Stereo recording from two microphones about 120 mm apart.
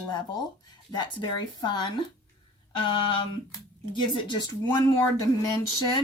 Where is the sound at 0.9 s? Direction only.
35° left (ahead or behind).